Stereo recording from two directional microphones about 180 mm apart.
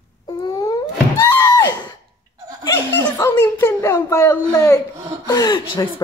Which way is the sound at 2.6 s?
15° left (ahead or behind).